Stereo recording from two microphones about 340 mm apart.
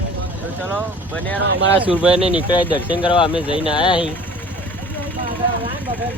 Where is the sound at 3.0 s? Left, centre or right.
Centre.